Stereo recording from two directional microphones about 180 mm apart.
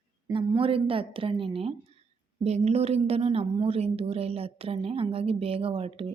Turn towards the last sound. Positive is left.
turn(degrees=-30)  # may be behind; listen again after turning